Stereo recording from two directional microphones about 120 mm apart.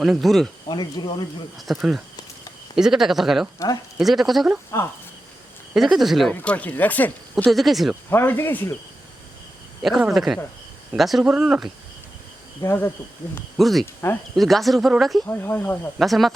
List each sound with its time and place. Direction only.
0.0 s speech: centre (ahead or behind)
0.7 s speech: 40° left (ahead or behind)
1.5 s speech: centre (ahead or behind)
5.7 s speech: centre (ahead or behind)
6.3 s speech: 10° left (ahead or behind)
7.5 s speech: centre (ahead or behind)
8.1 s speech: 20° left (ahead or behind)
9.8 s speech: centre (ahead or behind)
12.6 s speech: 20° left (ahead or behind)
13.6 s speech: centre (ahead or behind)
14.0 s speech: 20° left (ahead or behind)
14.3 s speech: centre (ahead or behind)
15.3 s speech: 20° left (ahead or behind)
16.0 s speech: centre (ahead or behind)